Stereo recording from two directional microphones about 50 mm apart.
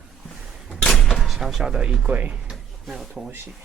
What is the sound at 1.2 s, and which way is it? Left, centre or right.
Speech, centre.